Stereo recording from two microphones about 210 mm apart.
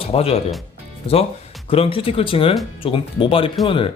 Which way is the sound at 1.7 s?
25° left (ahead or behind).